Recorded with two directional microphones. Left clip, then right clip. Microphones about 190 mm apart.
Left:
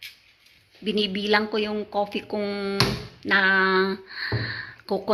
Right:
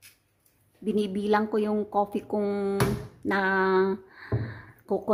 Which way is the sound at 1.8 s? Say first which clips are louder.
Even; centre (ahead or behind).